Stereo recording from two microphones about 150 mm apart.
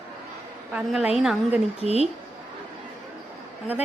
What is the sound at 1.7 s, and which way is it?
Speech, 45° left (ahead or behind).